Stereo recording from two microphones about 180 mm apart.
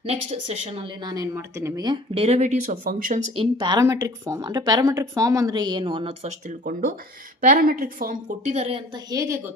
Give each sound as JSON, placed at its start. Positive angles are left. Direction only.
{"t": 0.0, "sound": "speech", "side_deg": -35}
{"t": 1.0, "sound": "speech", "side_deg": -20}
{"t": 2.1, "sound": "speech", "side_deg": -35}
{"t": 3.3, "sound": "speech", "side_deg": -25}
{"t": 6.6, "sound": "speech", "side_deg": -50}
{"t": 9.1, "sound": "speech", "side_deg": -20}